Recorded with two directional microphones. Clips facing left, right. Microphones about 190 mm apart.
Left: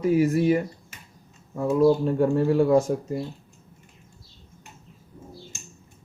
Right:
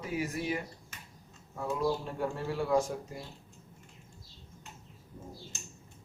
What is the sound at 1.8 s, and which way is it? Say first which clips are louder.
Speech: left 13 dB; 45° left (ahead or behind).